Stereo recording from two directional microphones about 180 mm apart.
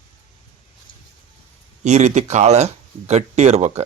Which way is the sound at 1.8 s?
40° right (ahead or behind).